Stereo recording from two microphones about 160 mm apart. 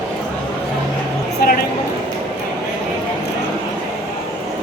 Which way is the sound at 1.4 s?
70° left (ahead or behind).